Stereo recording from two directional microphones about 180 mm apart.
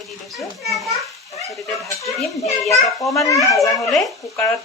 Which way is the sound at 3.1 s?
20° left (ahead or behind).